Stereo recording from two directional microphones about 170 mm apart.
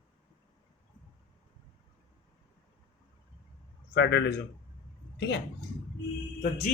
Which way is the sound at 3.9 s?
90° left.